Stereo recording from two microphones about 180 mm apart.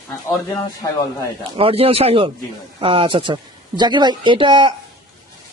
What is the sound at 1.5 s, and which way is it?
Speech, 30° right (ahead or behind).